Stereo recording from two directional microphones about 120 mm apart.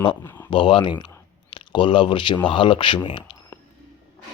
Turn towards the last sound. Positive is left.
turn(degrees=45)  # may be behind; listen again after turning